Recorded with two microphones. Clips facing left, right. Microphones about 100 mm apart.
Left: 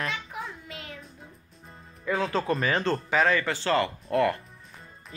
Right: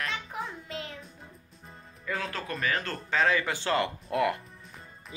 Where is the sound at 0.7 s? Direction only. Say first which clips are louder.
Right 3 dB; 30° right (ahead or behind).